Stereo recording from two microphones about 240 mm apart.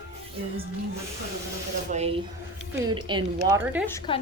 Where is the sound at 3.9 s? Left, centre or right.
Centre.